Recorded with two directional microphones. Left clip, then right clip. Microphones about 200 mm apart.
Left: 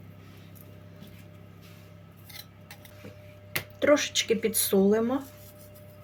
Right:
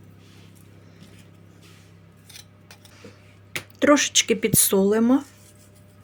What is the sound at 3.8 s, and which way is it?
Speech, 50° right (ahead or behind).